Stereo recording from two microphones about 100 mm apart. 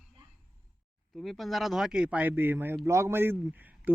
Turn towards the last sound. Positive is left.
turn(degrees=-20)  # may be behind; listen again after turning